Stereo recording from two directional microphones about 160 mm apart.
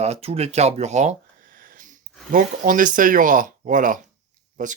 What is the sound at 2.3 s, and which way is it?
Speech, 55° right (ahead or behind).